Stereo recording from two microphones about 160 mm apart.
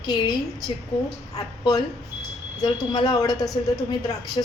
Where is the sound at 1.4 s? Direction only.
25° left (ahead or behind).